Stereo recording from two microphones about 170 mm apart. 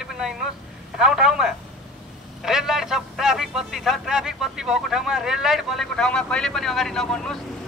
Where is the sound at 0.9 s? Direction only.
5° right (ahead or behind).